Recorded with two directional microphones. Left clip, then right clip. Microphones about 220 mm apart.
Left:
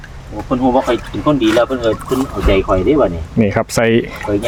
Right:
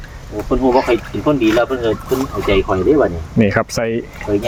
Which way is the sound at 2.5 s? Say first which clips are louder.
Left 1 dB; 35° left (ahead or behind).